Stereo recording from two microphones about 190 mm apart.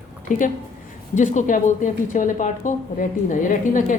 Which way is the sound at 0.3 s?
45° left (ahead or behind).